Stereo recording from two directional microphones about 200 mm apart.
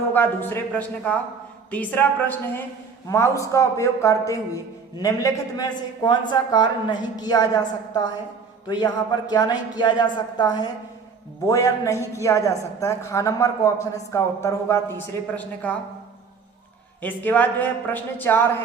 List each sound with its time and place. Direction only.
0.1 s a woman's voice: 10° left (ahead or behind)
17.0 s a woman's voice: 10° left (ahead or behind)